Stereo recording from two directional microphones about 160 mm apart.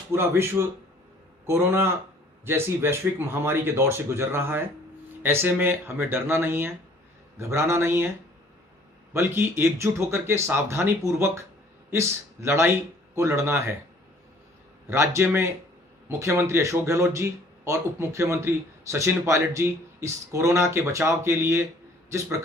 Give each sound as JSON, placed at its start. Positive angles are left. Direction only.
{"t": 0.1, "sound": "speech", "side_deg": -15}
{"t": 1.5, "sound": "speech", "side_deg": -15}
{"t": 9.1, "sound": "speech", "side_deg": -15}
{"t": 14.8, "sound": "a man's voice", "side_deg": -15}